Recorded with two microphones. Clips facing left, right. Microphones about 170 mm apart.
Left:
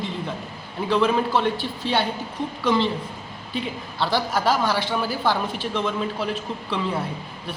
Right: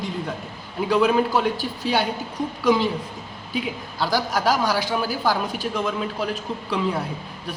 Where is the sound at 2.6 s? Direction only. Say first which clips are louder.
Right 2 dB; 5° right (ahead or behind).